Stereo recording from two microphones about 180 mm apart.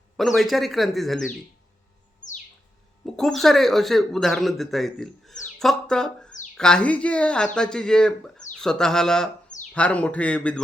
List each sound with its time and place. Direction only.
0.2 s speech: centre (ahead or behind)
2.2 s bird: 45° left (ahead or behind)
3.2 s a man's voice: centre (ahead or behind)